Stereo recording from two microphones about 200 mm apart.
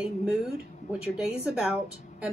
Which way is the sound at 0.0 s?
5° right (ahead or behind).